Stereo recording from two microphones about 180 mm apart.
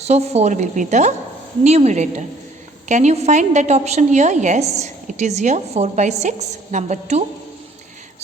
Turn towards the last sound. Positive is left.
turn(degrees=-40)  # may be behind; listen again after turning